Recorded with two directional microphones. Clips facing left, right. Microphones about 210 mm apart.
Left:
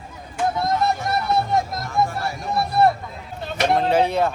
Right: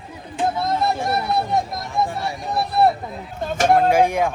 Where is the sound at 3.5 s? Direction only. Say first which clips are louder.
Right 3 dB; 45° right (ahead or behind).